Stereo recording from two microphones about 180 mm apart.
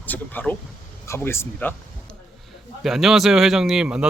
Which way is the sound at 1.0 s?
15° left (ahead or behind).